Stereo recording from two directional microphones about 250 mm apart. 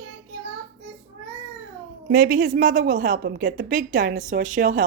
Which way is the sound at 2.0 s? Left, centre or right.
Right.